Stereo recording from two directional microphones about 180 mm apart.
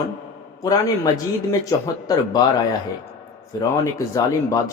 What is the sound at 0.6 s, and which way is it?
Speech, 20° left (ahead or behind).